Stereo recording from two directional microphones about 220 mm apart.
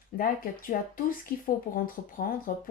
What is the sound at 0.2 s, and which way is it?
A woman's voice, 40° left (ahead or behind).